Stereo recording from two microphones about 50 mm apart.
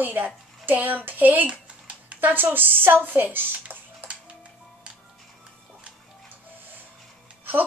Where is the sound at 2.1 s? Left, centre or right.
Right.